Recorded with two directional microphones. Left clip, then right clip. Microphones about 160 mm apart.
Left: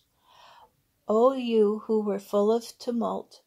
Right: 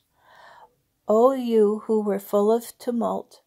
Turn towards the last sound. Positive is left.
turn(degrees=-45)  # may be behind; listen again after turning